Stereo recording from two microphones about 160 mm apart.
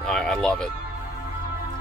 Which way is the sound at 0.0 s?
5° left (ahead or behind).